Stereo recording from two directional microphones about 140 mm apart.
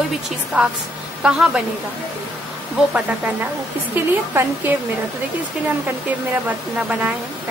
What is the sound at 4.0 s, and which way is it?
Speech, 10° right (ahead or behind).